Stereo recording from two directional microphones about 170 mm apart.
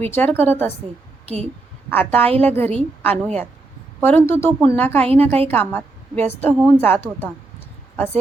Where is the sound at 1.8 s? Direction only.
10° left (ahead or behind).